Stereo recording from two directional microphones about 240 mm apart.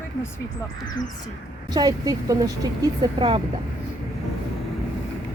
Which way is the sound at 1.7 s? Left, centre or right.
Centre.